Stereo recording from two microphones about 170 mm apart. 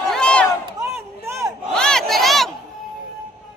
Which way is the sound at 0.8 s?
15° right (ahead or behind).